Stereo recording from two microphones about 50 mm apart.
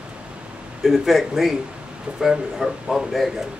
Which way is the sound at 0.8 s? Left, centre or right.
Centre.